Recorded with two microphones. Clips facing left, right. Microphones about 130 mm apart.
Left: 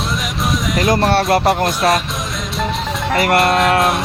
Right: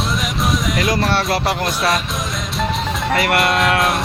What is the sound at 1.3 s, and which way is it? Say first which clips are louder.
Speech: left 5 dB; 50° left (ahead or behind).